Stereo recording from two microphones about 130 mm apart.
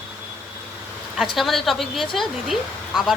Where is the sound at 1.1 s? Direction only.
Centre (ahead or behind).